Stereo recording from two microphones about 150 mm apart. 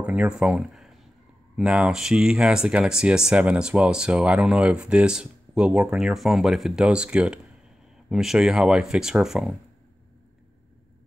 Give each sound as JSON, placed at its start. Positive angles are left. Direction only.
{"t": 0.0, "sound": "speech", "side_deg": -5}